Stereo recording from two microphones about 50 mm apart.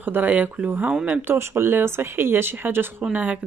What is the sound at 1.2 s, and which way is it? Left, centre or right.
Speech, right.